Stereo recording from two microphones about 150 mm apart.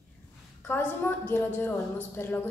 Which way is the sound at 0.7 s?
10° left (ahead or behind).